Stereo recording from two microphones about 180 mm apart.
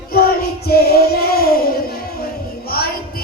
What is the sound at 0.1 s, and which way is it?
Child singing, 55° left (ahead or behind).